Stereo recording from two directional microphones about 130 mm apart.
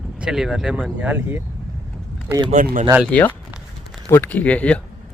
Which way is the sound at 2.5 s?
80° right.